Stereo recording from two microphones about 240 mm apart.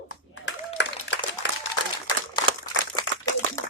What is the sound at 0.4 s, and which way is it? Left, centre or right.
Applause, left.